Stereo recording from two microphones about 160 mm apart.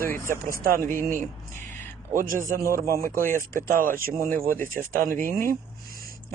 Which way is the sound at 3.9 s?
65° right (ahead or behind).